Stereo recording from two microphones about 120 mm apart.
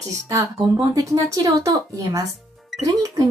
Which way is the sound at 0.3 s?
30° right (ahead or behind).